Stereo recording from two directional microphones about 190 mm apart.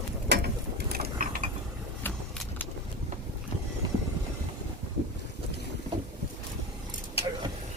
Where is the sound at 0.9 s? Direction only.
50° right (ahead or behind).